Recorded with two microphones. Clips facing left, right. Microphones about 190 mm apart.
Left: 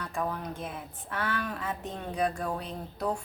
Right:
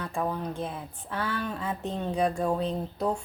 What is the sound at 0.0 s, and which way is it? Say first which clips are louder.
A woman's voice: right 3 dB; 25° right (ahead or behind).